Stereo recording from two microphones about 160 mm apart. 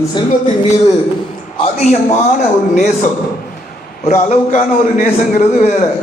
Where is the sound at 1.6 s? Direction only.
40° left (ahead or behind).